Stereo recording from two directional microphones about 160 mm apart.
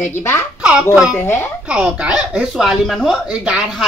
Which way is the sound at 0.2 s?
15° left (ahead or behind).